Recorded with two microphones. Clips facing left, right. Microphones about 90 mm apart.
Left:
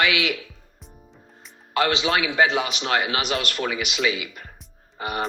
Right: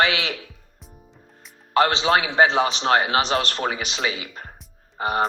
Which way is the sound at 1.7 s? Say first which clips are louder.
Right 3 dB; 35° right (ahead or behind).